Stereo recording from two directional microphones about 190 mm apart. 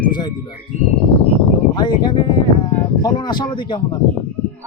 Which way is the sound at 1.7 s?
25° left (ahead or behind).